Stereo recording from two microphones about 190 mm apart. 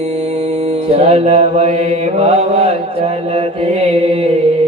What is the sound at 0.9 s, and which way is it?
Mantra, 35° right (ahead or behind).